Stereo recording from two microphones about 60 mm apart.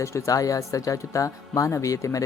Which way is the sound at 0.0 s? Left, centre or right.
Left.